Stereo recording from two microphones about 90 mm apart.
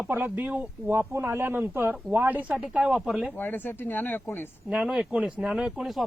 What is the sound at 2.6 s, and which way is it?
Speech, 10° right (ahead or behind).